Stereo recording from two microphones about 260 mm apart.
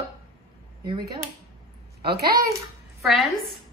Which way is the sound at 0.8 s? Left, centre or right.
Centre.